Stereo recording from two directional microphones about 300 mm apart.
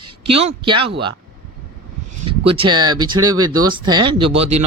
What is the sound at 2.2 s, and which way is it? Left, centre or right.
A man's voice, centre.